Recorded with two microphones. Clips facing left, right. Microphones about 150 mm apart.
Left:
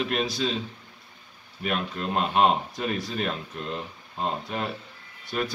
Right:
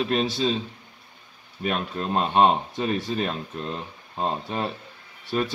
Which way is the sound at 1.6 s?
35° right (ahead or behind).